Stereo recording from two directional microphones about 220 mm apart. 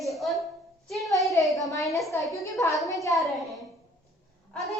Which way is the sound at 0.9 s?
Centre (ahead or behind).